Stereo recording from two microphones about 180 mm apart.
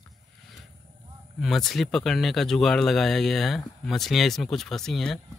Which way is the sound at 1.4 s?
Centre (ahead or behind).